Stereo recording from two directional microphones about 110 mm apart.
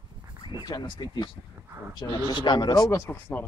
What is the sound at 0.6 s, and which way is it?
Speech, 45° left (ahead or behind).